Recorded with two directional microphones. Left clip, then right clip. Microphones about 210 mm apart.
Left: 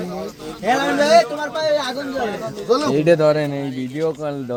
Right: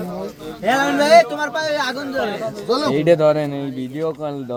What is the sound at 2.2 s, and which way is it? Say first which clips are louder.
Speech: left 4 dB; 30° right (ahead or behind).